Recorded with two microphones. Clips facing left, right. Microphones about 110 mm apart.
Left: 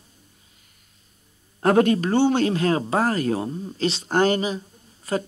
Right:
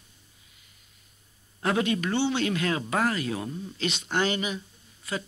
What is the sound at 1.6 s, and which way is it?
Speech, 45° left (ahead or behind).